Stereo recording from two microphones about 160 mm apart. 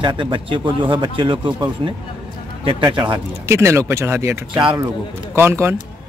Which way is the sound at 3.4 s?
15° right (ahead or behind).